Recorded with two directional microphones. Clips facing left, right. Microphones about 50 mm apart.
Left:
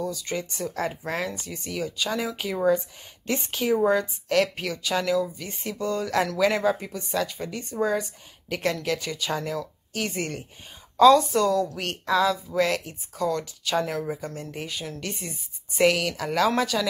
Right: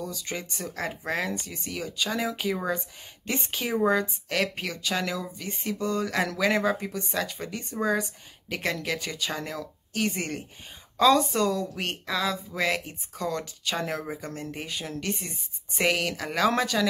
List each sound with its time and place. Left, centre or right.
0.0 s a woman's voice: centre
4.4 s a woman's voice: centre
12.1 s speech: centre
12.5 s a woman's voice: centre
14.5 s a woman's voice: centre